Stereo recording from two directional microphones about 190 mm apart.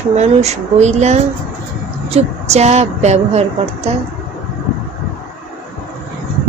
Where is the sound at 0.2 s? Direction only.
35° right (ahead or behind).